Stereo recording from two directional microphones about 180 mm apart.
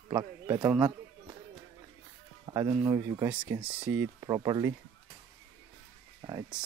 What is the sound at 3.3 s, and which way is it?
Speech, 5° right (ahead or behind).